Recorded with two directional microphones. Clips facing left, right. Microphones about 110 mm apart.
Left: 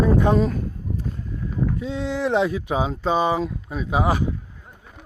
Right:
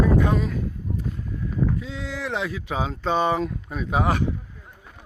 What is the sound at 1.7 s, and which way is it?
Speech, 25° left (ahead or behind).